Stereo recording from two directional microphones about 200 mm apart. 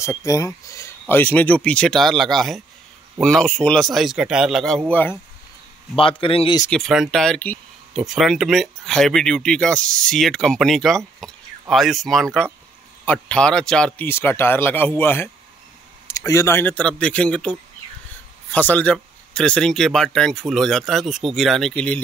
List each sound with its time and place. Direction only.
0.0 s speech: 15° left (ahead or behind)
5.9 s a man's voice: 25° left (ahead or behind)
6.7 s speech: centre (ahead or behind)
11.2 s a sound: centre (ahead or behind)
11.7 s speech: centre (ahead or behind)